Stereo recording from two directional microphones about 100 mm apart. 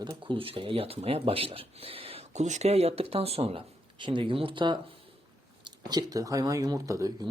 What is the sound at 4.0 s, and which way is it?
Speech, 55° right (ahead or behind).